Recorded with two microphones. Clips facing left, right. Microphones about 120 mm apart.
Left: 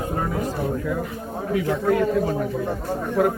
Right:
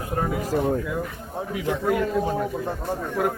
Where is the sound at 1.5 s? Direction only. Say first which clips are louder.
Left 3 dB; 20° right (ahead or behind).